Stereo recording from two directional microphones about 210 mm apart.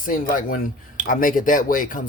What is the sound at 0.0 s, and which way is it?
Speech, 40° left (ahead or behind).